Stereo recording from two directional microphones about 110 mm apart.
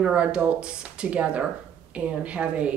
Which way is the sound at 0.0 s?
10° right (ahead or behind).